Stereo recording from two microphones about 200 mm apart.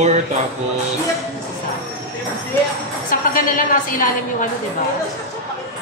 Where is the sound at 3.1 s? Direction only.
45° left (ahead or behind).